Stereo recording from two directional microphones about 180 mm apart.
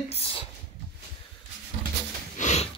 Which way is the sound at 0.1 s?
35° left (ahead or behind).